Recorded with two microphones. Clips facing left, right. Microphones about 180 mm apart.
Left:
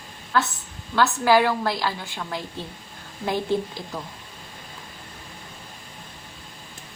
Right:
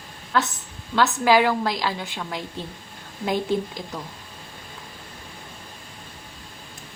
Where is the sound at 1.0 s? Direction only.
20° right (ahead or behind).